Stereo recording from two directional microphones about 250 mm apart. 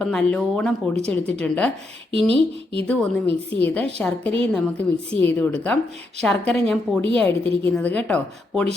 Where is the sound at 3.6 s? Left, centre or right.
Centre.